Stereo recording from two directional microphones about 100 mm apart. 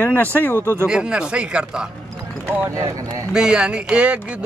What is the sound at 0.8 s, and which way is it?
Speech, 10° right (ahead or behind).